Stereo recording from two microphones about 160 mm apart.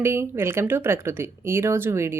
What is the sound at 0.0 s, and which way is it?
Speech, 15° right (ahead or behind).